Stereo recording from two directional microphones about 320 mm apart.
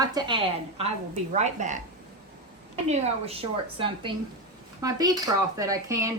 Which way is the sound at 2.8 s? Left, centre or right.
Centre.